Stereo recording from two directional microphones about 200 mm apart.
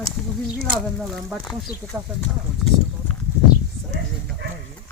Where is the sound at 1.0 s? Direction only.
Centre (ahead or behind).